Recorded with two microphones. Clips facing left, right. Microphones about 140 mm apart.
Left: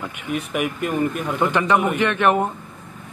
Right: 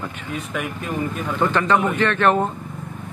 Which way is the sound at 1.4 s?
15° left (ahead or behind).